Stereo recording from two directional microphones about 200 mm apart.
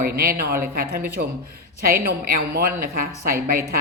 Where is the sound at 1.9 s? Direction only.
50° right (ahead or behind).